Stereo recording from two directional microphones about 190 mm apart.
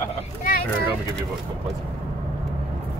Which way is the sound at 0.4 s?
50° left (ahead or behind).